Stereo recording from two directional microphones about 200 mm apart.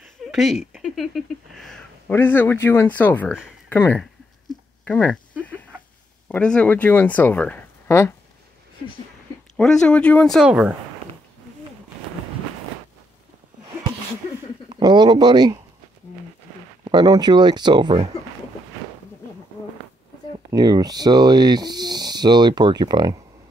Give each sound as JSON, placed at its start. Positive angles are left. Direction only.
{"t": 0.3, "sound": "speech", "side_deg": 0}
{"t": 6.2, "sound": "speech", "side_deg": 5}
{"t": 9.6, "sound": "speech", "side_deg": 5}
{"t": 14.7, "sound": "speech", "side_deg": -20}
{"t": 16.8, "sound": "speech", "side_deg": -20}
{"t": 20.5, "sound": "speech", "side_deg": -20}